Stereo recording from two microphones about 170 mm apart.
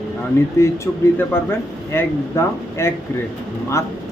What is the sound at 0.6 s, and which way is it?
Speech, 15° left (ahead or behind).